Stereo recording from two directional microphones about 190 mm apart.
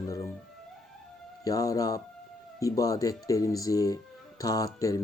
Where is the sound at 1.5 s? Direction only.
20° left (ahead or behind).